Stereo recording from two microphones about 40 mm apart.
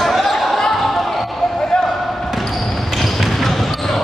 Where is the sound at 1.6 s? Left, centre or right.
Left.